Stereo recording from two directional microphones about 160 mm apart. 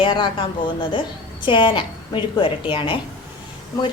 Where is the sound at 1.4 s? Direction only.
30° left (ahead or behind).